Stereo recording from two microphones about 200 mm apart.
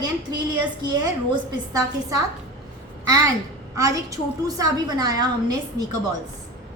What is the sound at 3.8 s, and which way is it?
A woman's voice, 15° right (ahead or behind).